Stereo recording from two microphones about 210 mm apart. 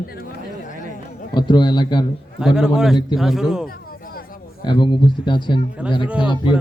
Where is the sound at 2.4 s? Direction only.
5° right (ahead or behind).